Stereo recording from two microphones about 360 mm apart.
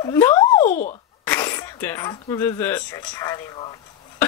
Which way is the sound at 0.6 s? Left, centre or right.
Left.